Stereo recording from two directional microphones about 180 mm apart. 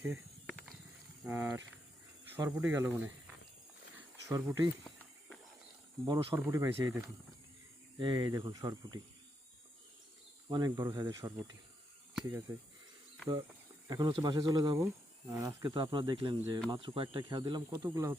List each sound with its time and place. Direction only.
0.4 s mechanisms: 5° left (ahead or behind)
1.2 s speech: 15° right (ahead or behind)
3.9 s insect: 15° right (ahead or behind)
4.8 s a sound: centre (ahead or behind)
6.1 s speech: 25° right (ahead or behind)
10.5 s speech: 20° right (ahead or behind)
12.5 s speech: 15° right (ahead or behind)
13.8 s speech: 20° right (ahead or behind)